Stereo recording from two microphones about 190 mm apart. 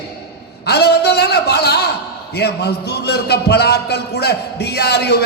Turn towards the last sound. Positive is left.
turn(degrees=60)  # may be behind; listen again after turning